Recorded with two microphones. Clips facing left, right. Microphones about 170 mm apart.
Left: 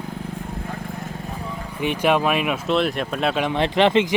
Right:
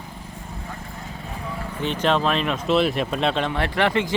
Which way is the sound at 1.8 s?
10° left (ahead or behind).